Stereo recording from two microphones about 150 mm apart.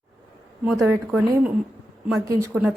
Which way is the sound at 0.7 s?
5° right (ahead or behind).